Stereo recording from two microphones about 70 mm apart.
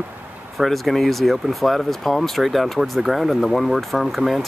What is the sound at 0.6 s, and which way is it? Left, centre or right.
Speech, centre.